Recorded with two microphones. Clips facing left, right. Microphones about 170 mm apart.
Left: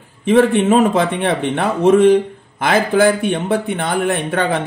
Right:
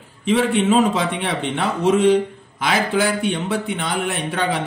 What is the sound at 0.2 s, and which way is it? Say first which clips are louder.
A man's voice: left 5 dB; 55° left (ahead or behind).